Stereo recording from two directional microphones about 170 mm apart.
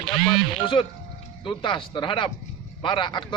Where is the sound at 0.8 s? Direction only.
25° left (ahead or behind).